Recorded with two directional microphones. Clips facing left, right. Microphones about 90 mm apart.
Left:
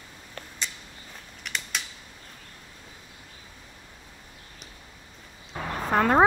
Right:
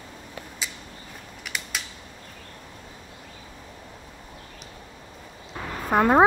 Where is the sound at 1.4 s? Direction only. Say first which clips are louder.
Even; 5° right (ahead or behind).